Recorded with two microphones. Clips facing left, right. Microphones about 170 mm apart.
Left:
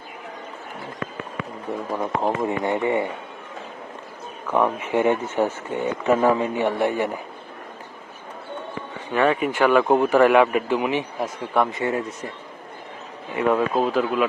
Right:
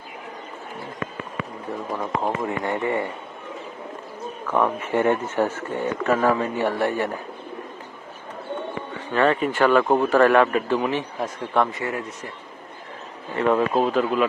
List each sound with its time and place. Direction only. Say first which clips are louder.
2.0 s speech: left 2 dB; 15° left (ahead or behind)
4.5 s speech: left 1 dB; 15° left (ahead or behind)
9.1 s speech: even; 10° left (ahead or behind)
11.8 s speech: left 4 dB; 25° left (ahead or behind)
13.3 s speech: even; 5° left (ahead or behind)